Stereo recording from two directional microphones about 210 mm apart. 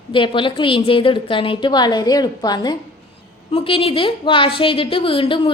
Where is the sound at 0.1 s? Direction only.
25° left (ahead or behind).